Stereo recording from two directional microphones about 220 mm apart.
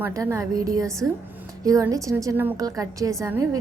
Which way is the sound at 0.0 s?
15° right (ahead or behind).